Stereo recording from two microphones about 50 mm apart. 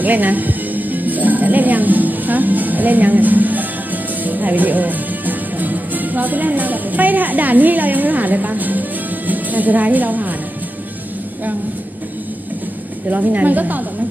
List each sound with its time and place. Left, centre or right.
0.0 s a woman's voice: right
13.1 s a woman's voice: right